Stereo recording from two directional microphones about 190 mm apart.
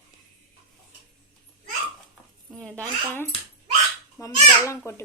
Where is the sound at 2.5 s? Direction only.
5° left (ahead or behind).